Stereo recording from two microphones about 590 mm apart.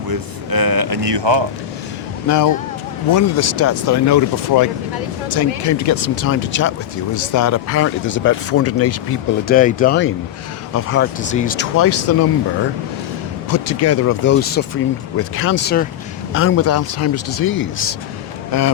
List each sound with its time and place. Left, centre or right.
0.1 s speech: right
2.2 s speech: left
13.5 s speech: left